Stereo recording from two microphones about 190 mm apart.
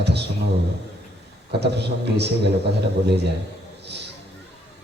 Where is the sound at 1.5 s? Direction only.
60° right (ahead or behind).